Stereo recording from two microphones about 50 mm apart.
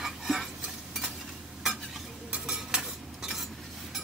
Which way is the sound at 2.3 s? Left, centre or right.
Centre.